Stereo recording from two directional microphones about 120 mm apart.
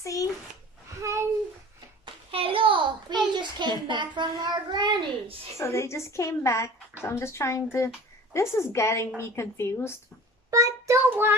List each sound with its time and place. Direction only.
0.0 s speech: 25° left (ahead or behind)
1.0 s a sound: 25° right (ahead or behind)
2.3 s a sound: 45° right (ahead or behind)
5.6 s speech: 25° left (ahead or behind)
10.5 s child singing: 30° right (ahead or behind)
11.1 s child singing: 15° right (ahead or behind)